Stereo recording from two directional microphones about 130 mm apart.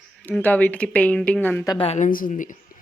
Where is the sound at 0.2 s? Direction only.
10° left (ahead or behind).